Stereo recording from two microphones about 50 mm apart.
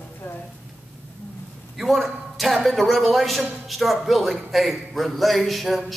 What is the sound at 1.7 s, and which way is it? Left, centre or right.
Speech, centre.